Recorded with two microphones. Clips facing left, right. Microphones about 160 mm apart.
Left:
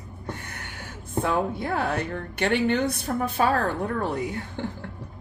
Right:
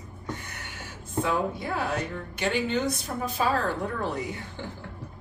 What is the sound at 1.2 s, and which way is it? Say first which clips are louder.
Speech: left 3 dB; 55° left (ahead or behind).